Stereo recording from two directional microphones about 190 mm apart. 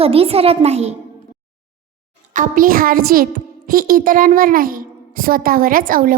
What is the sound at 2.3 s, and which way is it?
A woman's voice, 45° right (ahead or behind).